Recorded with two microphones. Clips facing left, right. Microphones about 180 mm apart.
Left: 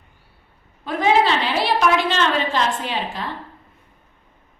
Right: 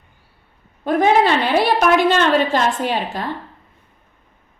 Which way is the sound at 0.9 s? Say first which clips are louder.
Right 3 dB; 50° right (ahead or behind).